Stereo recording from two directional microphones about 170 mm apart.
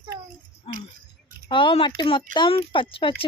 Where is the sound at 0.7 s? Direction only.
35° left (ahead or behind).